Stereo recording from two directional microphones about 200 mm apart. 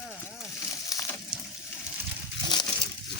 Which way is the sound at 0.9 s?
15° left (ahead or behind).